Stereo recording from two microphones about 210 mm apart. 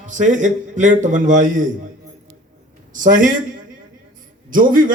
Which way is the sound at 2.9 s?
40° right (ahead or behind).